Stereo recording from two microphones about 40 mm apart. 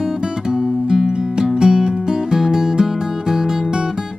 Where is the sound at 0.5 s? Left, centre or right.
Centre.